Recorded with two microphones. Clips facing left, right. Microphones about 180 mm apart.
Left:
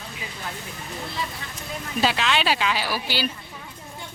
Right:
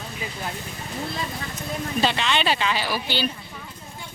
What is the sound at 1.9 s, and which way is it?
Speech, 5° left (ahead or behind).